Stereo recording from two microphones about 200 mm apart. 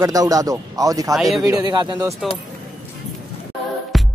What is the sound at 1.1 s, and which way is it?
Speech, centre (ahead or behind).